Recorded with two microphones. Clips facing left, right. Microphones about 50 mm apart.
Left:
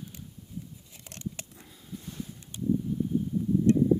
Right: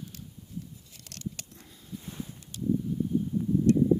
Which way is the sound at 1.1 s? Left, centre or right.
Left.